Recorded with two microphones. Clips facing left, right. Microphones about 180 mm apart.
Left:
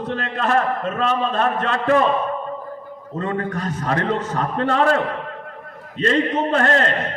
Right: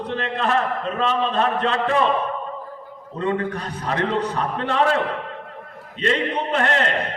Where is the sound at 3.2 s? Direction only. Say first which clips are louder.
Right 1 dB; 45° left (ahead or behind).